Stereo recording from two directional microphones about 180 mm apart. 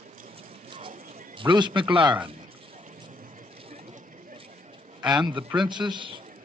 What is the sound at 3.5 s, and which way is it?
Vehicle, 30° right (ahead or behind).